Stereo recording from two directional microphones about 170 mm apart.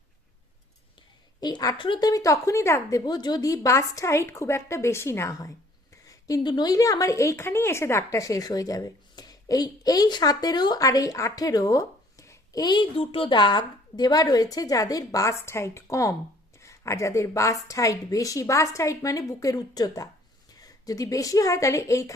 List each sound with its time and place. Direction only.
1.4 s a woman's voice: 25° left (ahead or behind)